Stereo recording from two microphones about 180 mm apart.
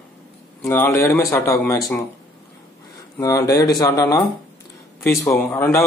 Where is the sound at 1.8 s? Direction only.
Centre (ahead or behind).